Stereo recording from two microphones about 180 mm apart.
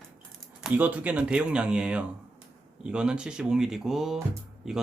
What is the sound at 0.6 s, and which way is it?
Speech, 10° right (ahead or behind).